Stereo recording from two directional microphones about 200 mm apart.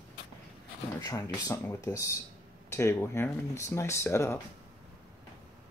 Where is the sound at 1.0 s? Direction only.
15° left (ahead or behind).